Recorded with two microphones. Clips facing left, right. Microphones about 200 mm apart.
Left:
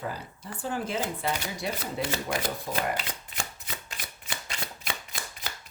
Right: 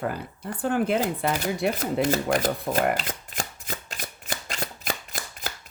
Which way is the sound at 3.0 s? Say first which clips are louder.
Right 4 dB; 45° right (ahead or behind).